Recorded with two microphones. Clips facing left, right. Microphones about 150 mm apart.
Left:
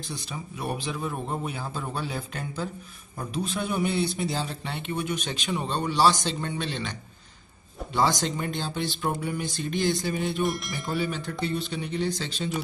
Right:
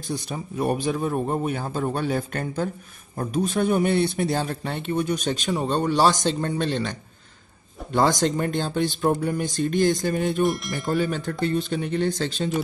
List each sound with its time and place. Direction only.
0.1 s speech: 45° right (ahead or behind)
10.4 s wind chime: centre (ahead or behind)
10.9 s speech: 45° right (ahead or behind)